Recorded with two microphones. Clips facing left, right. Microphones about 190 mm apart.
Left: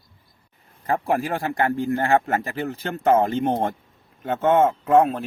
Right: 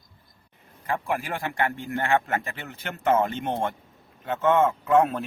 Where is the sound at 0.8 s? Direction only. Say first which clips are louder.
Left 6 dB; 40° left (ahead or behind).